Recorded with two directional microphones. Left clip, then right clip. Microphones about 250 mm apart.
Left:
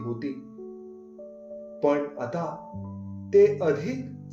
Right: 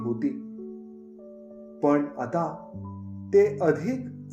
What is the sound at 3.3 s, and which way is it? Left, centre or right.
Speech, right.